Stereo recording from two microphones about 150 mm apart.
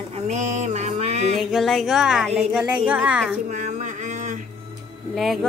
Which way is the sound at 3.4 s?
55° right (ahead or behind).